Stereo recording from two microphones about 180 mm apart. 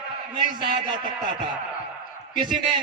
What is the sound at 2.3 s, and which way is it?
Speech, 25° right (ahead or behind).